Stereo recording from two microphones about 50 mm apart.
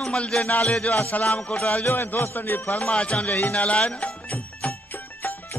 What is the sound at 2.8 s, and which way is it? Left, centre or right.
Speech, left.